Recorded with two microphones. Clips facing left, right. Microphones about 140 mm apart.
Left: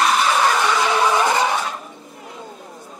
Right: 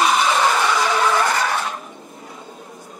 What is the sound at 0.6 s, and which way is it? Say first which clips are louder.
Vehicle: left 1 dB; 15° left (ahead or behind).